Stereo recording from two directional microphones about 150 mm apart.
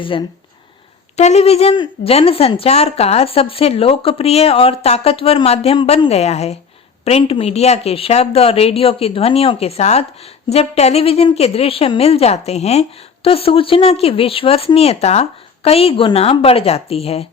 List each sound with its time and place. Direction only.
0.0 s a woman's voice: 35° left (ahead or behind)
1.1 s a woman's voice: 50° left (ahead or behind)